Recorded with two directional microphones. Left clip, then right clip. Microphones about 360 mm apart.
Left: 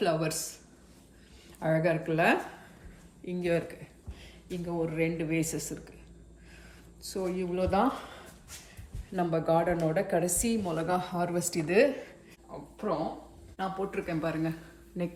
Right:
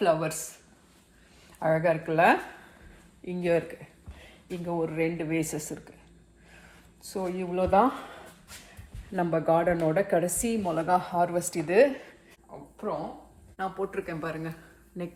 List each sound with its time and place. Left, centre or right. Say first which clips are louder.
0.0 s a woman's voice: right 4 dB; centre
7.1 s a woman's voice: right 1 dB; centre
13.6 s speech: right 2 dB; centre